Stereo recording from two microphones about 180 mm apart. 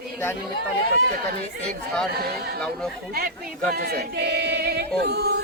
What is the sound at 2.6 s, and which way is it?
Speech, 5° left (ahead or behind).